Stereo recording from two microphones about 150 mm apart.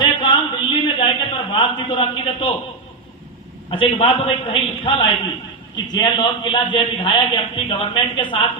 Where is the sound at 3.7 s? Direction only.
35° left (ahead or behind).